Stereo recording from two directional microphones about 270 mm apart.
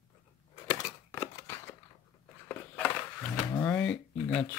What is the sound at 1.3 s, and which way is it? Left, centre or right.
Scissors, centre.